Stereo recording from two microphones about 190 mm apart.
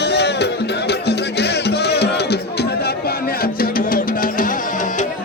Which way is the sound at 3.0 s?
50° left (ahead or behind).